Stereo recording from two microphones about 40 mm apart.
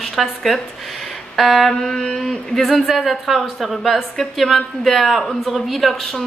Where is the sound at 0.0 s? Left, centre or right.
Centre.